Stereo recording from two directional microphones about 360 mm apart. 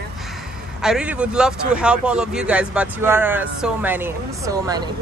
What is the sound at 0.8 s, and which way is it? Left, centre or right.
Speech, centre.